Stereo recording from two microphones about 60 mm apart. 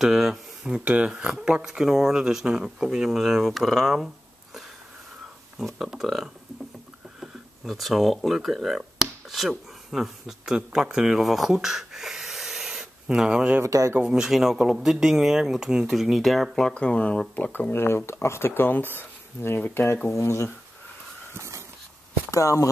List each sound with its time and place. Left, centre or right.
0.0 s speech: centre
5.8 s speech: centre
13.6 s speech: right
13.9 s speech: centre
16.7 s speech: centre
17.5 s speech: left
20.1 s speech: left
21.3 s dog: right
22.3 s speech: left